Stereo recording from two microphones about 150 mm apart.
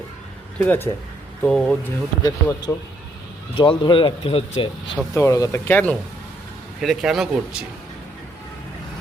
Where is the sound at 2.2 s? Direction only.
25° left (ahead or behind).